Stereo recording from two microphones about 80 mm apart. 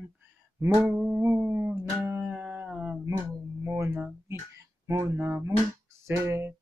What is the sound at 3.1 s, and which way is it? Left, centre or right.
Speech, right.